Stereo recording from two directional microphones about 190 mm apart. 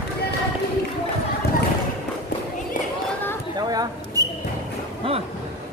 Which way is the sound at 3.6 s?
20° right (ahead or behind).